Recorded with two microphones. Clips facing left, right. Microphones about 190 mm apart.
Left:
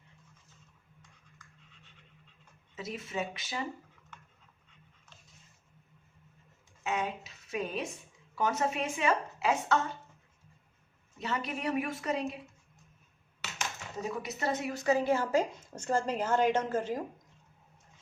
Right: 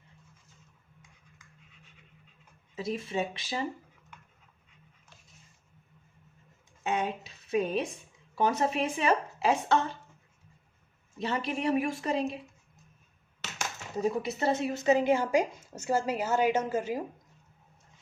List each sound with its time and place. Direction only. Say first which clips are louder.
2.7 s a woman's voice: right 5 dB; 30° right (ahead or behind)
6.8 s a woman's voice: right 3 dB; 30° right (ahead or behind)
11.2 s a woman's voice: right 4 dB; 30° right (ahead or behind)
13.6 s speech: right 7 dB; 35° right (ahead or behind); by 17.0 s 10° right (ahead or behind)